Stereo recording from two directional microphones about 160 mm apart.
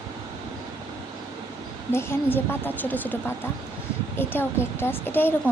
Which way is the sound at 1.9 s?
15° left (ahead or behind).